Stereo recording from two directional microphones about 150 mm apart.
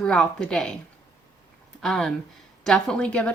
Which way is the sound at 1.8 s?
5° left (ahead or behind).